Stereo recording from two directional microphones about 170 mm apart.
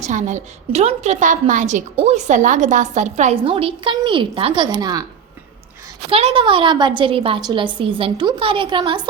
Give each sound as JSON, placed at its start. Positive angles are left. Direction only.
{"t": 0.0, "sound": "a woman's voice", "side_deg": -45}
{"t": 6.1, "sound": "a woman's voice", "side_deg": -35}